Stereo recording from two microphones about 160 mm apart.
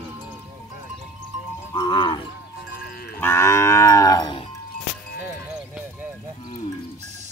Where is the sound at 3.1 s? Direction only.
15° left (ahead or behind).